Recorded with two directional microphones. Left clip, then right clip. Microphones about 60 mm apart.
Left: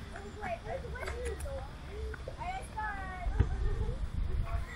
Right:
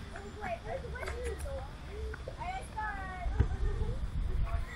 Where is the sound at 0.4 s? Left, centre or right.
Centre.